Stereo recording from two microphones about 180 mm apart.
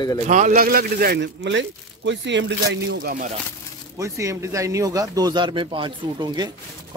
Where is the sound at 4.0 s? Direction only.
15° right (ahead or behind).